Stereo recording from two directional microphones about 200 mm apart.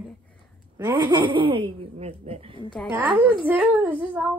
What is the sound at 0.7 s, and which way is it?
Speech, 20° right (ahead or behind).